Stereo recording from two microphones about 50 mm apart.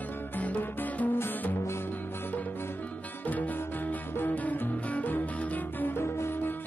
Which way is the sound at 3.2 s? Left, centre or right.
Left.